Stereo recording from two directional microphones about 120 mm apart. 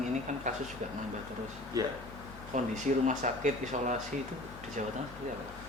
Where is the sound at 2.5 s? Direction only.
90° right.